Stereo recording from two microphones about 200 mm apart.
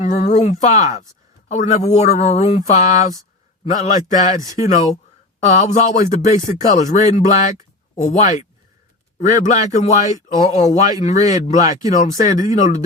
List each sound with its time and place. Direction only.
0.0 s speech: 35° left (ahead or behind)